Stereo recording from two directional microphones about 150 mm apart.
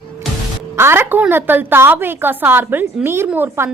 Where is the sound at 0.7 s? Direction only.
15° right (ahead or behind).